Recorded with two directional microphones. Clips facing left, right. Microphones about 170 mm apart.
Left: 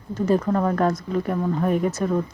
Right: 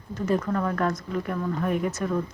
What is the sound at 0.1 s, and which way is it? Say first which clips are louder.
Speech: left 5 dB; 35° left (ahead or behind).